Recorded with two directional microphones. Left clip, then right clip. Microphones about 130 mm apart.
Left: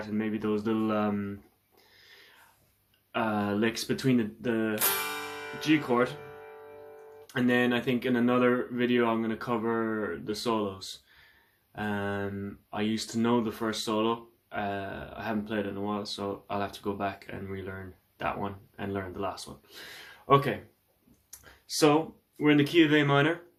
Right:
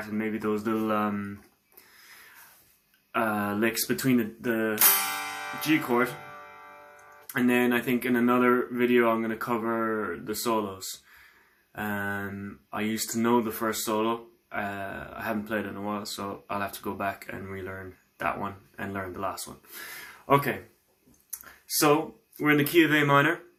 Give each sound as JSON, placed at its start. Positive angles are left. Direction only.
{"t": 0.1, "sound": "speech", "side_deg": 25}
{"t": 3.1, "sound": "speech", "side_deg": 25}
{"t": 5.0, "sound": "music", "side_deg": 25}
{"t": 6.2, "sound": "music", "side_deg": 35}
{"t": 7.3, "sound": "speech", "side_deg": 20}
{"t": 21.2, "sound": "a sound", "side_deg": 25}
{"t": 22.4, "sound": "speech", "side_deg": 20}